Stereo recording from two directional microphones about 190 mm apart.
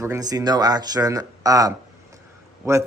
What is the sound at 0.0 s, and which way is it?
Speech, 15° right (ahead or behind).